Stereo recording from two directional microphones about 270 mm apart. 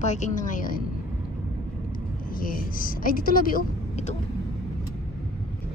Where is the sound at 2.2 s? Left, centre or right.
Left.